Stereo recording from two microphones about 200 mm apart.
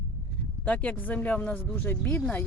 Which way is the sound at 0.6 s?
5° left (ahead or behind).